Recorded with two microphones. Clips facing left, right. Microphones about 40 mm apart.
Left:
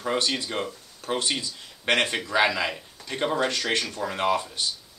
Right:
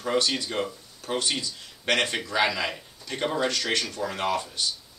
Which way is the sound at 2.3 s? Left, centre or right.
Centre.